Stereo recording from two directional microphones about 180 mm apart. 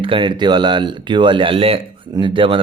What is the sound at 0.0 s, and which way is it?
Speech, 25° right (ahead or behind).